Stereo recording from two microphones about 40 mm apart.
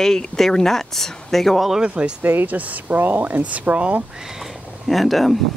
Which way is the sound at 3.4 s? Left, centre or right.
Right.